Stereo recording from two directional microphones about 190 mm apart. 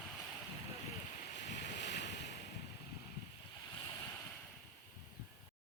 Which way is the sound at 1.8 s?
65° left (ahead or behind).